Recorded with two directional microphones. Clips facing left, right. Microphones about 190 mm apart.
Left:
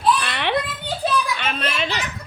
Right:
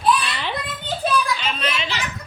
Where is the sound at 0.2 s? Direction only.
60° left (ahead or behind).